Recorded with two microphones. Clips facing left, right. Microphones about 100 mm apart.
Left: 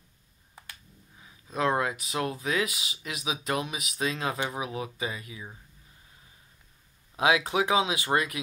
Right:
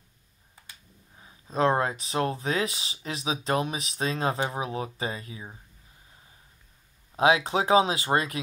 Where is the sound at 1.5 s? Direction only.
30° right (ahead or behind).